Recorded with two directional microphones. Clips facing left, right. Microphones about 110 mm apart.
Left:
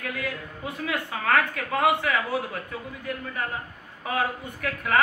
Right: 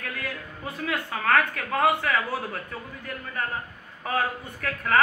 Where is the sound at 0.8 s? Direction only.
15° left (ahead or behind).